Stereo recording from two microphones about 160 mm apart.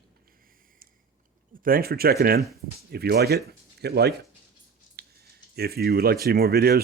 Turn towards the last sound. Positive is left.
turn(degrees=-75)  # may be behind; listen again after turning